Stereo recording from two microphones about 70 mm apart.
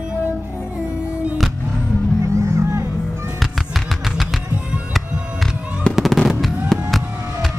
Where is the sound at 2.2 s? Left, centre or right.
Right.